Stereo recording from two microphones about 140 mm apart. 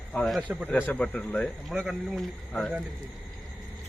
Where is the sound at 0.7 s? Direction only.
10° left (ahead or behind).